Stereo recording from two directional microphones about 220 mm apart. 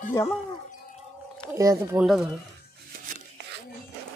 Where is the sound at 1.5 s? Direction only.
15° right (ahead or behind).